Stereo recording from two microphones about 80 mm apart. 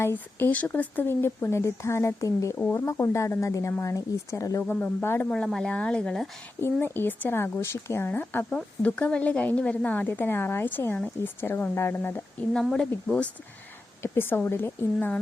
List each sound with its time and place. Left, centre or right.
0.0 s speech: left
4.7 s speech: left
5.3 s speech: centre
6.7 s speech: left
10.1 s speech: left
12.7 s speech: centre
14.0 s speech: left